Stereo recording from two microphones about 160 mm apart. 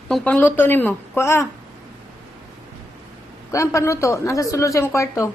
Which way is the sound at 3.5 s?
20° left (ahead or behind).